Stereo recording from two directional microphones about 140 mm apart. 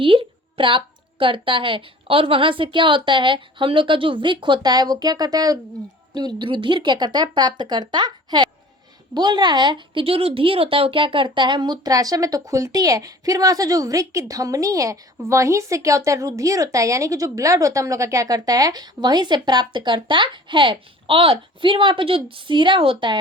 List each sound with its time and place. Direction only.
0.0 s a woman's voice: 40° right (ahead or behind)